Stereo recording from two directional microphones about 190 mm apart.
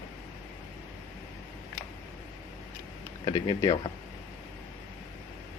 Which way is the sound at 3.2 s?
25° left (ahead or behind).